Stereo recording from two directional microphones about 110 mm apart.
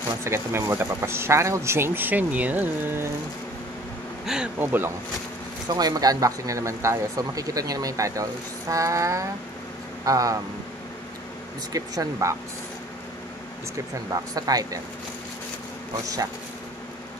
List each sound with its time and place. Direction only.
0.2 s speech: 25° right (ahead or behind)
4.6 s speech: 20° right (ahead or behind)
5.7 s speech: 35° right (ahead or behind)
11.7 s speech: 35° right (ahead or behind)
14.1 s speech: 35° right (ahead or behind)